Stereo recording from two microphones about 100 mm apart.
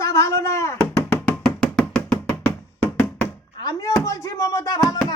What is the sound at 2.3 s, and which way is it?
Knock, 25° left (ahead or behind).